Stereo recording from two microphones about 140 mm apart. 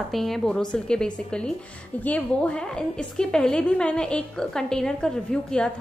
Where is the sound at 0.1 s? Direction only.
Centre (ahead or behind).